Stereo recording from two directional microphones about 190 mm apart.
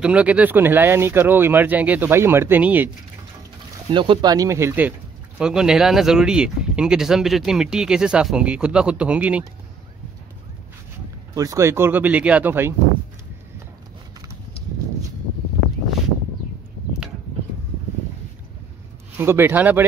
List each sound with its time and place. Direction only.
0.0 s speech: 5° right (ahead or behind)
3.9 s speech: 25° right (ahead or behind); by 9.4 s 5° right (ahead or behind)
11.3 s speech: 15° right (ahead or behind)
19.1 s speech: 10° right (ahead or behind)